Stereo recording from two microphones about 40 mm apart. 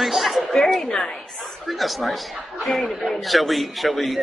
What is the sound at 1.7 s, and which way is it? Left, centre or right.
A man's voice, centre.